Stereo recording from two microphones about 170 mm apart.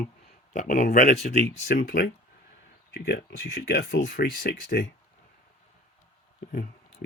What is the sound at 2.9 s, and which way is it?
Speech, 75° left (ahead or behind).